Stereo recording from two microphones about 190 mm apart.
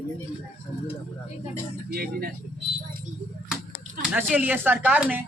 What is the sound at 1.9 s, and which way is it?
Speech, 50° right (ahead or behind).